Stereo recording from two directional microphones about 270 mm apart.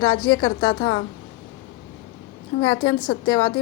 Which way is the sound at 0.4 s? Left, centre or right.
Centre.